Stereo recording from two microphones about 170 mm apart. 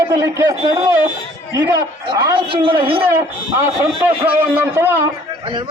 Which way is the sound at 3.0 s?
15° right (ahead or behind).